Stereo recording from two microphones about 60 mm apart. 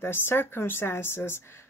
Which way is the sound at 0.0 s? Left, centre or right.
Left.